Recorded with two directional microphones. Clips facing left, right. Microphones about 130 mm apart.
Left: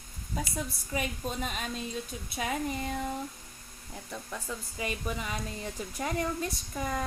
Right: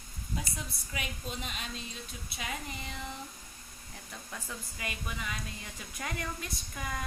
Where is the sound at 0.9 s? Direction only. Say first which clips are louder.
Left 7 dB; 40° left (ahead or behind).